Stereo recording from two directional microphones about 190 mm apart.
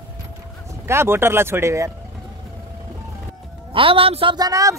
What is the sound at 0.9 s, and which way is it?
Speech, 15° right (ahead or behind).